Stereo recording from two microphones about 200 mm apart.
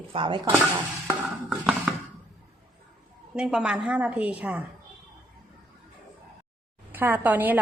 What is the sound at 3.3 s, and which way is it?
A woman's voice, 5° right (ahead or behind).